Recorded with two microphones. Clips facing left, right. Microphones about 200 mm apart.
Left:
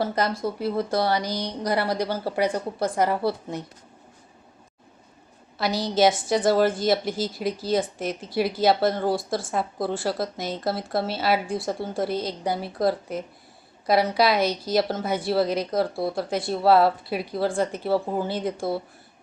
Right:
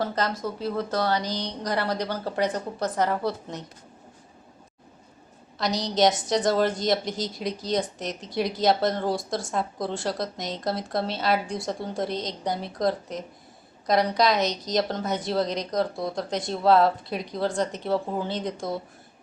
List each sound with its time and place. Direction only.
0.0 s a woman's voice: 10° left (ahead or behind)
5.5 s a woman's voice: 5° left (ahead or behind)